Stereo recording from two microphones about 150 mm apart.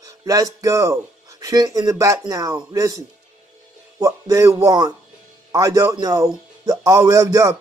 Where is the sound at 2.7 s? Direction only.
25° right (ahead or behind).